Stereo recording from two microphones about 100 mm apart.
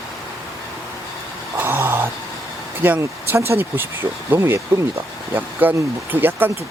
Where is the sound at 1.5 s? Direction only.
20° right (ahead or behind).